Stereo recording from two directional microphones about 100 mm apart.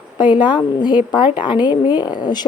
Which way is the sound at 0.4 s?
50° left (ahead or behind).